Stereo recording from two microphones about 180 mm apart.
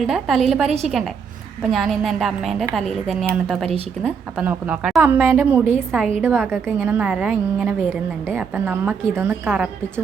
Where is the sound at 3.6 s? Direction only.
35° right (ahead or behind).